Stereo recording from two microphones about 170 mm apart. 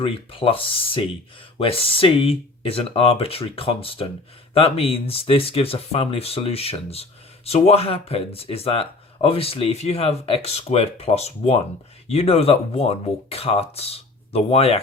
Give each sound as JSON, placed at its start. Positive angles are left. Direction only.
{"t": 0.0, "sound": "speech", "side_deg": 30}